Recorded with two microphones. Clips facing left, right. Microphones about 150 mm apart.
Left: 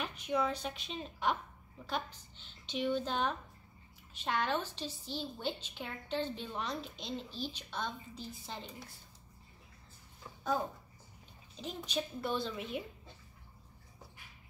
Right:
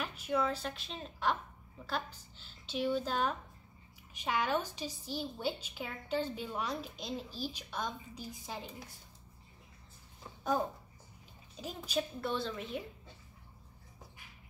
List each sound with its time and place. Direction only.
0.0 s a woman's voice: centre (ahead or behind)
2.7 s a woman's voice: 5° right (ahead or behind)
11.6 s a woman's voice: 5° right (ahead or behind)